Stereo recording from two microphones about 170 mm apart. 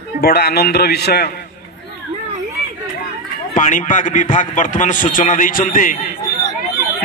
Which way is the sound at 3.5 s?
50° left (ahead or behind).